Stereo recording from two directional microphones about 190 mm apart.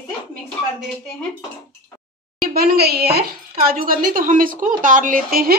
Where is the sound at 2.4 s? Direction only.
50° right (ahead or behind).